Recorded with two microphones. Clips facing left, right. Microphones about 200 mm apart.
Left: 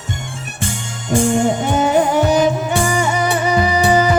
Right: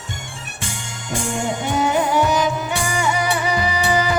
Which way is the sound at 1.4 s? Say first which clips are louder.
Left 5 dB; 45° left (ahead or behind).